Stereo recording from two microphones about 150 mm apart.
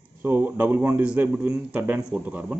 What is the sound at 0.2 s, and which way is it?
Speech, 10° right (ahead or behind).